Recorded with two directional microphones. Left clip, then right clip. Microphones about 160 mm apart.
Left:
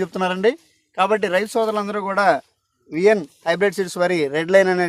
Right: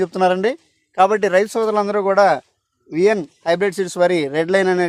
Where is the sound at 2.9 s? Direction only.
40° right (ahead or behind).